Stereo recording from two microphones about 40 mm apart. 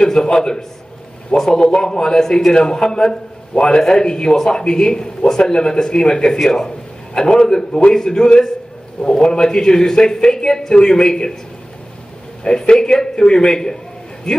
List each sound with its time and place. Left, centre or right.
0.0 s a sound: centre
1.3 s a man's voice: centre
12.4 s a man's voice: left